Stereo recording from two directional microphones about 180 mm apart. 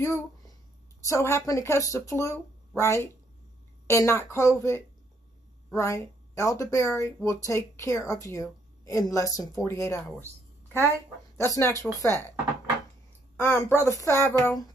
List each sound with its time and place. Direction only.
0.0 s speech: 15° left (ahead or behind)
11.3 s speech: 15° left (ahead or behind)
13.4 s speech: 10° left (ahead or behind)